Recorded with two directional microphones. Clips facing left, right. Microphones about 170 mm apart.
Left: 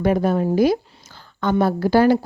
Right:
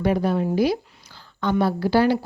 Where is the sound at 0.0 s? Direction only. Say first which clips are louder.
Left 3 dB; 50° left (ahead or behind).